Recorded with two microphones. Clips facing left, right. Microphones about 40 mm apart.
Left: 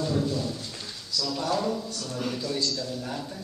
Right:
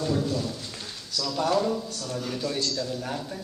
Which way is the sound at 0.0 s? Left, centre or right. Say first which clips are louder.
Even; centre.